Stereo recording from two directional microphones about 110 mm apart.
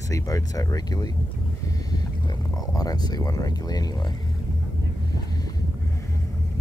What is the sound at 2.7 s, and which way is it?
Speech, 35° left (ahead or behind).